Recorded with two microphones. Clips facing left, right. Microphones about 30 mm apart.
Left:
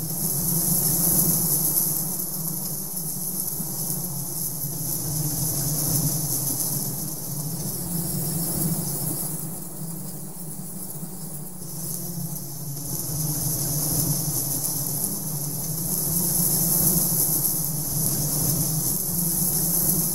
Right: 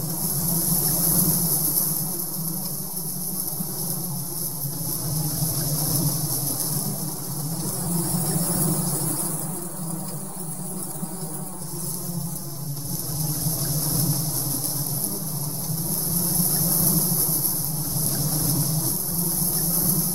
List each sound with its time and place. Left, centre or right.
0.2 s vehicle: centre
5.1 s vehicle: right
7.8 s vehicle: right
13.2 s vehicle: right
15.9 s vehicle: right